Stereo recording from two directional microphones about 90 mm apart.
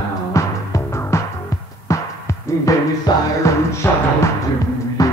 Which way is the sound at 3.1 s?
50° left (ahead or behind).